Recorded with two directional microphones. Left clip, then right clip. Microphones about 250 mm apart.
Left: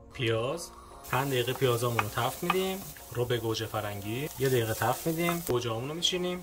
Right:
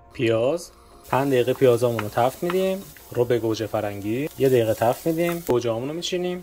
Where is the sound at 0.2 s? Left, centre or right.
Centre.